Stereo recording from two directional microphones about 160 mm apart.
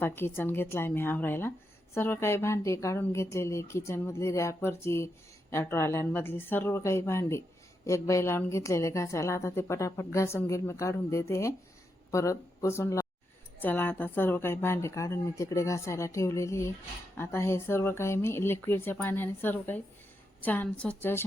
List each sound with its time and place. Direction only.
0.0 s a woman's voice: 15° left (ahead or behind)